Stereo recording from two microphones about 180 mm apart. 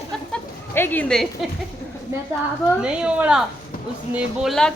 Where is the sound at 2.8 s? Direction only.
5° right (ahead or behind).